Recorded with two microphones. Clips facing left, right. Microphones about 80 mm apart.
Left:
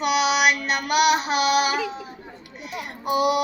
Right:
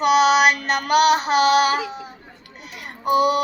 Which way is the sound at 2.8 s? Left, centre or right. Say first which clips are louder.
Right 4 dB; right.